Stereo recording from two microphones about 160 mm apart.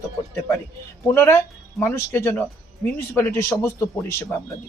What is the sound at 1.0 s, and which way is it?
Speech, 15° left (ahead or behind).